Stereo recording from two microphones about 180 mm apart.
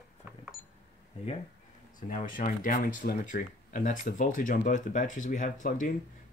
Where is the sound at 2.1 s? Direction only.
45° left (ahead or behind).